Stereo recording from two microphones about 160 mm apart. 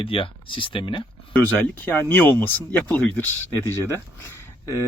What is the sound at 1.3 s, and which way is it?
Speech, 10° left (ahead or behind).